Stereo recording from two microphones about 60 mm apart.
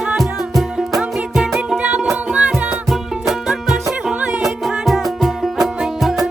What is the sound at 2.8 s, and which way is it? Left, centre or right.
Music, centre.